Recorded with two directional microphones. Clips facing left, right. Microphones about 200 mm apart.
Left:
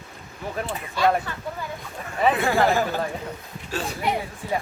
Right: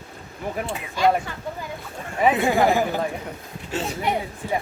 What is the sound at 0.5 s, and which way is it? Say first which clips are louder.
Speech: left 1 dB; 10° right (ahead or behind).